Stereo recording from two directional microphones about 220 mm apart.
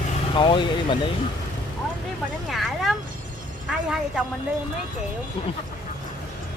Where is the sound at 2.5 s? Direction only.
Centre (ahead or behind).